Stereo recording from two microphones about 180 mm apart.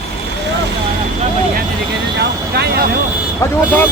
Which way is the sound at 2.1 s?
65° right (ahead or behind).